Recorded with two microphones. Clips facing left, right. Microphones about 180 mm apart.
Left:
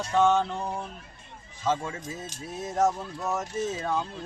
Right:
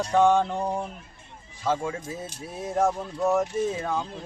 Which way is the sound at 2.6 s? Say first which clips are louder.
Right 1 dB; 10° right (ahead or behind).